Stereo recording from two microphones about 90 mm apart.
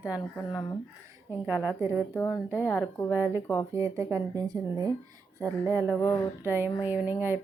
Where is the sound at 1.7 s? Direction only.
30° right (ahead or behind).